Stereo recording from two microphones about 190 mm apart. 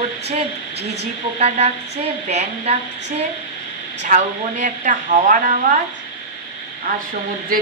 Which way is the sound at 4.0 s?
40° right (ahead or behind).